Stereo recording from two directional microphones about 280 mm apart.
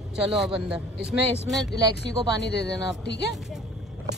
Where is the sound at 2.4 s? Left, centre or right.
Left.